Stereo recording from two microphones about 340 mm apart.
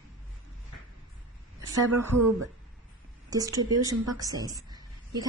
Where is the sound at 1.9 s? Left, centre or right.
Right.